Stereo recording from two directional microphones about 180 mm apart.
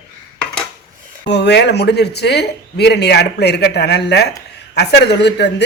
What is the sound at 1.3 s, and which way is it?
Speech, 70° left (ahead or behind).